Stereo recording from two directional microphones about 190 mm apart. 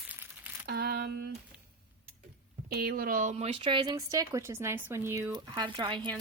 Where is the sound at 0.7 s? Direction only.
55° right (ahead or behind).